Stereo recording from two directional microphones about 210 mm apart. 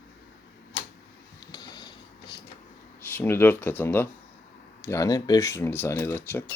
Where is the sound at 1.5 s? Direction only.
20° left (ahead or behind).